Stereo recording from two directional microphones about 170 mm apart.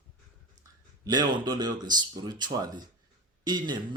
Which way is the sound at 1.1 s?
25° right (ahead or behind).